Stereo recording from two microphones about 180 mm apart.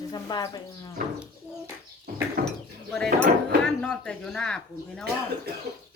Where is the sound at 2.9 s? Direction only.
5° left (ahead or behind).